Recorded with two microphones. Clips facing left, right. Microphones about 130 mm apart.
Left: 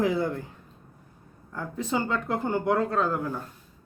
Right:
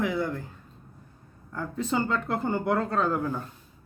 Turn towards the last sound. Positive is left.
turn(degrees=0)  # may be behind; listen again after turning